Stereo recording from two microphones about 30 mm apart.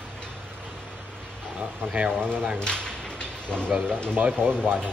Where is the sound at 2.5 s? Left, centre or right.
Left.